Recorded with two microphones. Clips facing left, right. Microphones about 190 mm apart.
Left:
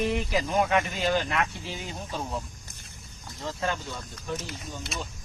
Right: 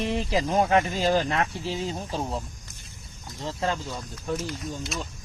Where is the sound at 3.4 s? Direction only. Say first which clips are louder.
Right 2 dB; 30° right (ahead or behind).